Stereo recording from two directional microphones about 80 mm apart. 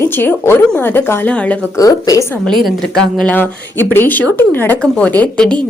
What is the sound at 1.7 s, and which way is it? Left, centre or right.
Speech, left.